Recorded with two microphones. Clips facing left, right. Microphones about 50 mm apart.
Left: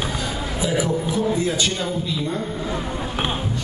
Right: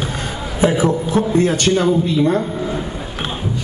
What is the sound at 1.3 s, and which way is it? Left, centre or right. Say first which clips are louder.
A man's voice: right 8 dB; right.